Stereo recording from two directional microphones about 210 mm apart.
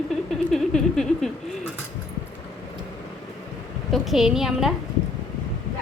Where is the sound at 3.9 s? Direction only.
Centre (ahead or behind).